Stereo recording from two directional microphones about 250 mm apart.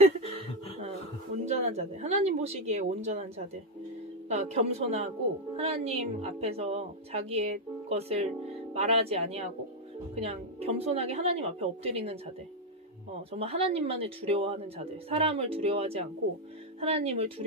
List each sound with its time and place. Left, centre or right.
1.4 s a woman's voice: right
13.3 s a woman's voice: right